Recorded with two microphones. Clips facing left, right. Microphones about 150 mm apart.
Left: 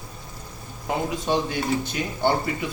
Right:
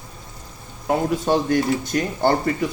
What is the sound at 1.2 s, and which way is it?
Speech, 45° right (ahead or behind).